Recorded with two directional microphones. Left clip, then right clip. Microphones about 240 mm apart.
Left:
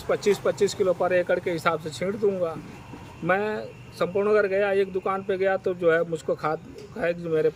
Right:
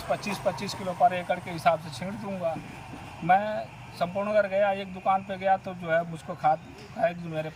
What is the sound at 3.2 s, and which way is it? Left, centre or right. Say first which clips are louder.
Speech: right 1 dB; left.